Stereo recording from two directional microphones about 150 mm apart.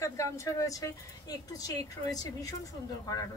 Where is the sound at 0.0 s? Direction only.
20° left (ahead or behind).